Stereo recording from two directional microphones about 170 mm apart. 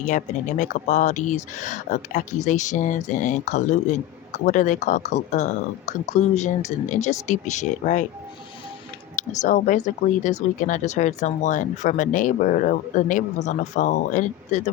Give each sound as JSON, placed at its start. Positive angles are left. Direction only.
{"t": 0.0, "sound": "speech", "side_deg": 45}
{"t": 9.1, "sound": "speech", "side_deg": 45}